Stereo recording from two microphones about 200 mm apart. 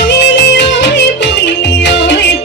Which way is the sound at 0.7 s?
60° left (ahead or behind).